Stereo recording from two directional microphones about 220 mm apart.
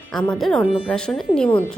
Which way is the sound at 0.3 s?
Centre (ahead or behind).